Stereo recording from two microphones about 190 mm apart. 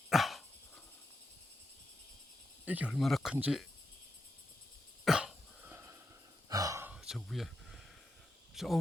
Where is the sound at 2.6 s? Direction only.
10° right (ahead or behind).